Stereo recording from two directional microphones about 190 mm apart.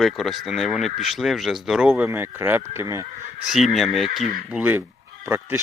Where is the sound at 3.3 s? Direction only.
Centre (ahead or behind).